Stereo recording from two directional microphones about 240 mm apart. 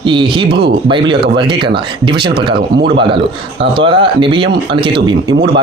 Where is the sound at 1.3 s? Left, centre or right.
Right.